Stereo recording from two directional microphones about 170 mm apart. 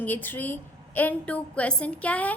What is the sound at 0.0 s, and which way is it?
A woman's voice, 10° left (ahead or behind).